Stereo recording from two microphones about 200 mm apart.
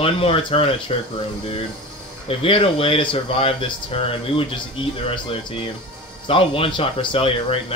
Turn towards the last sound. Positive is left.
turn(degrees=30)  # may be behind; listen again after turning